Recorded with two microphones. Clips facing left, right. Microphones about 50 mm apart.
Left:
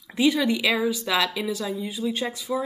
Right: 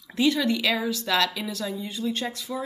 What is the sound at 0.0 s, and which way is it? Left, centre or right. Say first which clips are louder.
A woman's voice: left 2 dB; centre.